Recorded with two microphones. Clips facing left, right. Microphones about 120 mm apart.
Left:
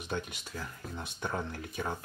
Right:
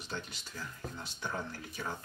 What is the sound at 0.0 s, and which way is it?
Speech, 55° left (ahead or behind).